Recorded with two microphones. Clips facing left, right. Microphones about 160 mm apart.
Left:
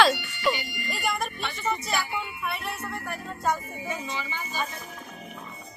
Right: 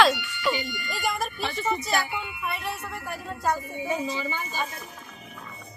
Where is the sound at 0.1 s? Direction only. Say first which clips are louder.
Even; 40° left (ahead or behind).